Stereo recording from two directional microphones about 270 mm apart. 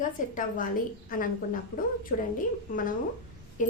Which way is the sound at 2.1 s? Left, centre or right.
Left.